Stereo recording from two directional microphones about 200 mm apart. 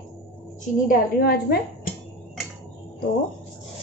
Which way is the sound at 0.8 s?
45° left (ahead or behind).